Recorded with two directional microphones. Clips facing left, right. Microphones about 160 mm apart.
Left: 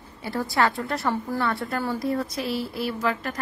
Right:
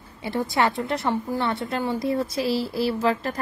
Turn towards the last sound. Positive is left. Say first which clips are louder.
# right 4 dB
turn(degrees=-30)  # may be behind; listen again after turning